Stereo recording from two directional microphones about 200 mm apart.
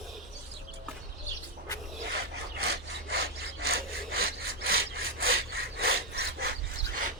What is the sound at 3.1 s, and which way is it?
Sawing, 50° right (ahead or behind).